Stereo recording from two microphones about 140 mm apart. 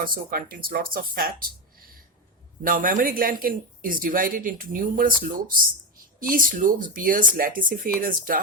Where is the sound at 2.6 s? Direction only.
75° right (ahead or behind).